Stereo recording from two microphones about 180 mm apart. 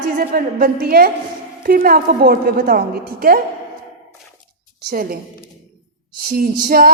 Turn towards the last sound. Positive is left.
turn(degrees=-55)  # may be behind; listen again after turning